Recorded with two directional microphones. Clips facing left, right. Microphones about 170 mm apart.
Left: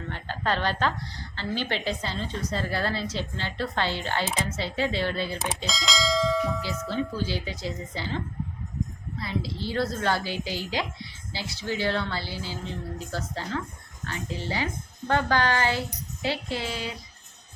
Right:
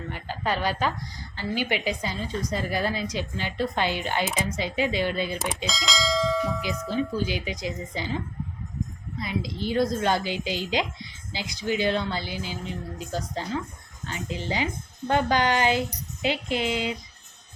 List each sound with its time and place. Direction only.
0.1 s a woman's voice: 10° right (ahead or behind)
5.6 s speech: centre (ahead or behind)
6.8 s a woman's voice: 15° right (ahead or behind)